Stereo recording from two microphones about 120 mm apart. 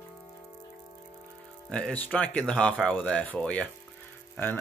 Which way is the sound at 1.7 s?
10° left (ahead or behind).